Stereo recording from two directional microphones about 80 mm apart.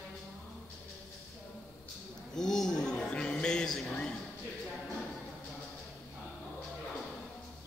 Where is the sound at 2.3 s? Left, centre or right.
Centre.